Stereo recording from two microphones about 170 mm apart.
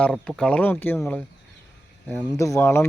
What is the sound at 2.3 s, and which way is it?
Speech, 20° left (ahead or behind).